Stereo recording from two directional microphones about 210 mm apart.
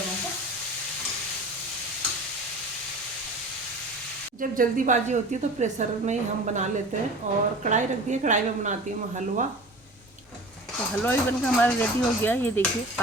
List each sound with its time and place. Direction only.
4.4 s a woman's voice: 40° right (ahead or behind)
11.0 s speech: 10° left (ahead or behind)